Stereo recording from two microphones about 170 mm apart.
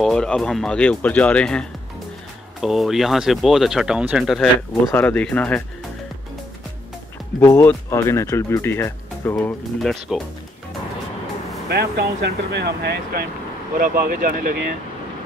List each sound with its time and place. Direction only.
0.0 s speech: 5° left (ahead or behind)
7.3 s speech: 15° left (ahead or behind)
11.7 s speech: 75° right (ahead or behind)
13.7 s speech: 55° right (ahead or behind)